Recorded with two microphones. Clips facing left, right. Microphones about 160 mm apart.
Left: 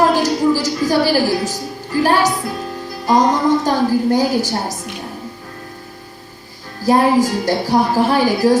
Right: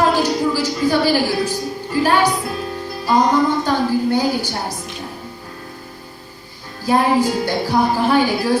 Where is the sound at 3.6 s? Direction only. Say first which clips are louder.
Left 2 dB; 40° left (ahead or behind).